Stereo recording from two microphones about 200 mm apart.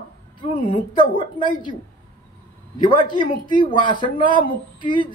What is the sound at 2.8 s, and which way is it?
A man's voice, 25° left (ahead or behind).